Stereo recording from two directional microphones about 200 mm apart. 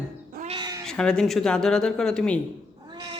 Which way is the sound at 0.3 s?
30° right (ahead or behind).